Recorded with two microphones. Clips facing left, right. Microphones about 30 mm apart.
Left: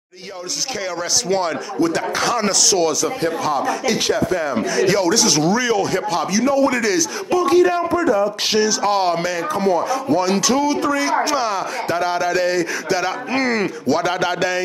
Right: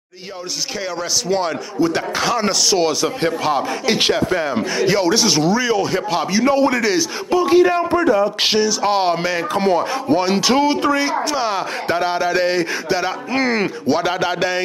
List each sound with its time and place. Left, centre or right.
1.3 s speech: centre
3.0 s speech: right
4.8 s speech: centre
7.9 s speech: right
8.8 s speech: centre
9.5 s speech: right
13.3 s speech: centre